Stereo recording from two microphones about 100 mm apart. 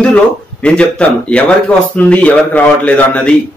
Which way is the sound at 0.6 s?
10° left (ahead or behind).